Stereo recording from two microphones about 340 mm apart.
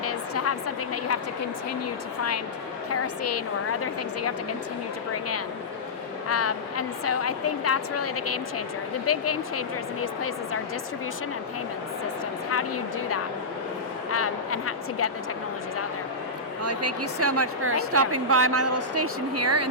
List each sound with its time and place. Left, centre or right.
0.0 s a sound: left
2.9 s a woman's voice: left
6.2 s a woman's voice: left
12.5 s speech: left
16.6 s a woman's voice: right